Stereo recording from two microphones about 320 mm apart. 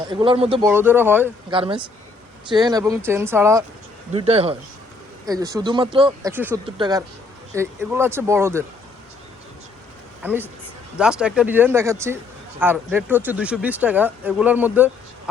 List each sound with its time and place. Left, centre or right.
0.1 s speech: centre
4.1 s speech: centre
10.2 s a man's voice: centre